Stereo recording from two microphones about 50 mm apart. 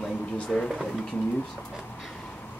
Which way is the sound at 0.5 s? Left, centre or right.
Centre.